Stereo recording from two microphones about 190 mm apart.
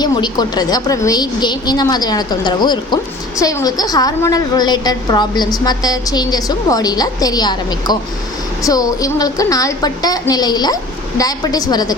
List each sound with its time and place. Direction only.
0.0 s a woman's voice: 20° left (ahead or behind)